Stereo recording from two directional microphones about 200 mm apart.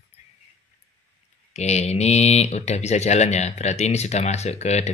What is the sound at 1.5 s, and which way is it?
Speech, 35° left (ahead or behind).